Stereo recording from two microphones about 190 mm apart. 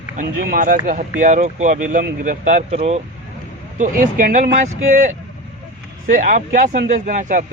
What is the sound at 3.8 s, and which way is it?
Speech, 45° right (ahead or behind).